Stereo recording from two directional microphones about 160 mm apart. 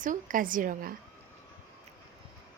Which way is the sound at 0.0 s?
55° right (ahead or behind).